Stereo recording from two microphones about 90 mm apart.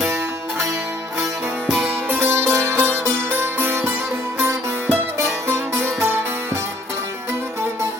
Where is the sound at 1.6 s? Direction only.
5° left (ahead or behind).